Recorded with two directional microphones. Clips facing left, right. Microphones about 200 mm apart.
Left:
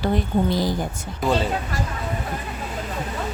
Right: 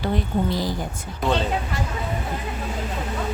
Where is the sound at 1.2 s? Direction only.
5° left (ahead or behind).